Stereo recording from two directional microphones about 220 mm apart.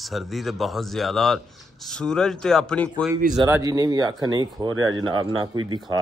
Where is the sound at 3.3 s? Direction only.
15° right (ahead or behind).